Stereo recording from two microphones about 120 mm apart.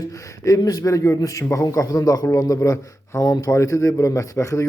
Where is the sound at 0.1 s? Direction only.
30° left (ahead or behind).